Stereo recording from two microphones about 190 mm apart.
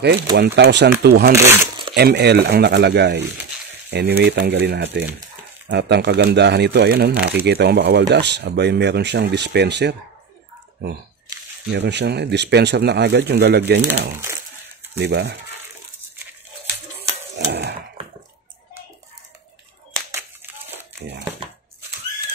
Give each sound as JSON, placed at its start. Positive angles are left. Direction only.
{"t": 0.6, "sound": "speech", "side_deg": -60}
{"t": 1.3, "sound": "speech", "side_deg": -15}
{"t": 2.0, "sound": "speech", "side_deg": -60}
{"t": 11.7, "sound": "speech", "side_deg": -65}
{"t": 17.5, "sound": "a sound", "side_deg": -65}
{"t": 20.7, "sound": "crumpling", "side_deg": -20}